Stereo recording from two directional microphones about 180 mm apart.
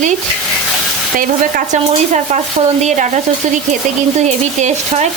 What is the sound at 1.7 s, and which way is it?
Stir, 40° right (ahead or behind).